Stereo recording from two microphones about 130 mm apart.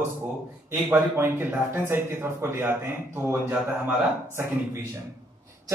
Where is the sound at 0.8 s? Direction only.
15° right (ahead or behind).